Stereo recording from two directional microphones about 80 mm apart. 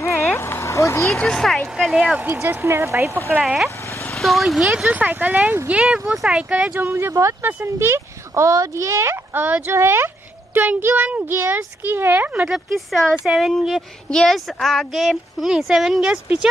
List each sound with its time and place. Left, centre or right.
0.3 s a sound: left
1.1 s speech: centre
1.9 s speech: centre
2.3 s speech: right
3.3 s speech: centre
4.8 s speech: right
6.8 s speech: right
12.4 s speech: centre